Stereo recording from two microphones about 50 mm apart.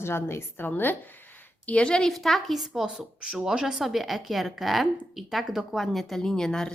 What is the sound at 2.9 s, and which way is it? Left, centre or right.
A woman's voice, centre.